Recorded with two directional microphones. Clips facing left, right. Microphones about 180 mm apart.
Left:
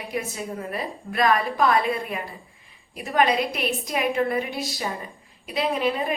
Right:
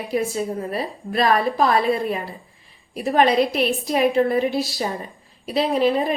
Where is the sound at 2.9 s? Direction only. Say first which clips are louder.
Right 5 dB; 35° right (ahead or behind).